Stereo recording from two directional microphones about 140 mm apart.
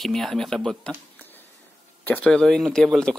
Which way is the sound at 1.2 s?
15° left (ahead or behind).